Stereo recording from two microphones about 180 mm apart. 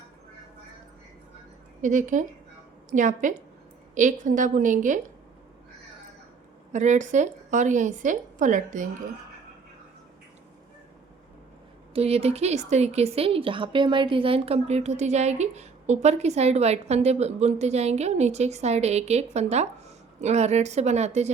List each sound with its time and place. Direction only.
1.8 s a woman's voice: 45° right (ahead or behind)
6.7 s a woman's voice: 40° right (ahead or behind)
11.9 s speech: 35° right (ahead or behind)